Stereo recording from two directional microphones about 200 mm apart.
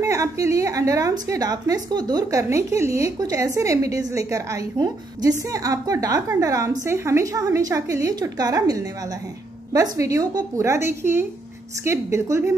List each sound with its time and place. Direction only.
0.0 s a woman's voice: 15° right (ahead or behind)